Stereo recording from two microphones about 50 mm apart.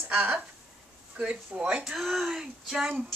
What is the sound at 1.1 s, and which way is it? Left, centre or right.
Speech, right.